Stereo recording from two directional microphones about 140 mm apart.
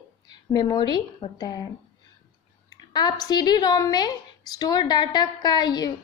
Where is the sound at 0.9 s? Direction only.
30° left (ahead or behind).